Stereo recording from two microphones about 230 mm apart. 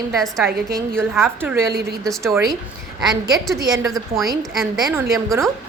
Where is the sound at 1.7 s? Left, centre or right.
Right.